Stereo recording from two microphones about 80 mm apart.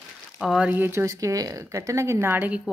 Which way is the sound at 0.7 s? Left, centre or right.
Right.